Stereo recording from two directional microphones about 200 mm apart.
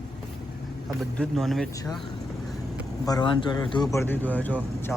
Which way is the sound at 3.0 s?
20° left (ahead or behind).